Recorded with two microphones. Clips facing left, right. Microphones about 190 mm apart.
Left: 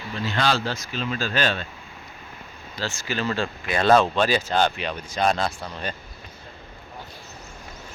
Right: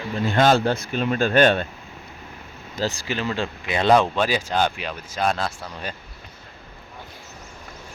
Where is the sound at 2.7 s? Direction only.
40° right (ahead or behind).